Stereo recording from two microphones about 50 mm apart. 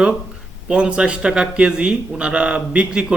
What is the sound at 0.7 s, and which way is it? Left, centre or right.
Speech, right.